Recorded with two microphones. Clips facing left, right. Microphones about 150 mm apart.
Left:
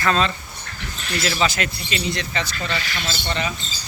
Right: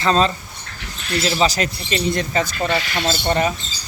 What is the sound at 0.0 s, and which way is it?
Speech, 35° right (ahead or behind).